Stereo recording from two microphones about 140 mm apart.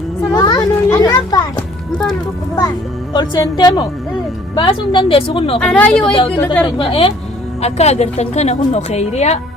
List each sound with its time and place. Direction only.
0.3 s children playing: 30° left (ahead or behind)
2.6 s a woman's voice: 30° left (ahead or behind)
5.5 s speech: 10° left (ahead or behind)
6.1 s a woman's voice: 35° left (ahead or behind)
7.6 s a woman's voice: 50° left (ahead or behind)